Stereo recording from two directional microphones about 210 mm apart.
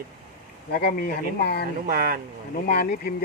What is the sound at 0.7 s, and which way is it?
Speech, 45° left (ahead or behind).